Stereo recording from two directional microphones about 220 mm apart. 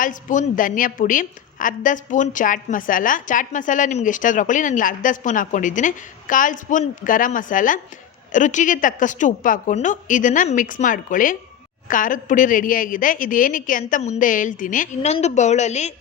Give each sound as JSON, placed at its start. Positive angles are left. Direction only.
{"t": 0.0, "sound": "a woman's voice", "side_deg": 35}